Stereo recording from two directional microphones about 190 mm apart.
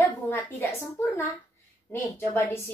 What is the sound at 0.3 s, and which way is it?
A woman's voice, 10° left (ahead or behind).